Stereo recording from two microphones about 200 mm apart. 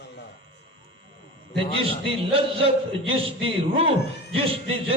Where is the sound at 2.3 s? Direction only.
25° right (ahead or behind).